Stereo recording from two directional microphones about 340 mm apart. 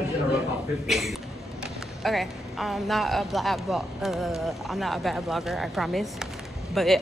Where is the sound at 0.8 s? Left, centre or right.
Centre.